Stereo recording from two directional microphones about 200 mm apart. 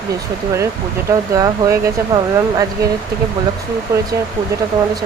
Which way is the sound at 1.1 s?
20° right (ahead or behind).